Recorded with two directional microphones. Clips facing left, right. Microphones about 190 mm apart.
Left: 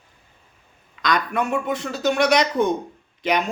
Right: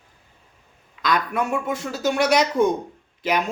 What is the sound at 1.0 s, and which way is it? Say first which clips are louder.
Speech: even; 5° right (ahead or behind).